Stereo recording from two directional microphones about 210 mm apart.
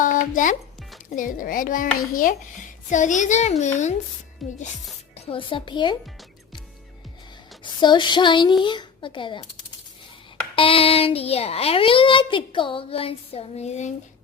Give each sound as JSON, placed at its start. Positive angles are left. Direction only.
{"t": 0.0, "sound": "music", "side_deg": 40}
{"t": 1.1, "sound": "a child's voice", "side_deg": 40}
{"t": 4.4, "sound": "speech", "side_deg": 0}
{"t": 5.1, "sound": "a child's voice", "side_deg": 25}
{"t": 7.6, "sound": "a child's voice", "side_deg": 20}
{"t": 10.5, "sound": "a child's voice", "side_deg": 25}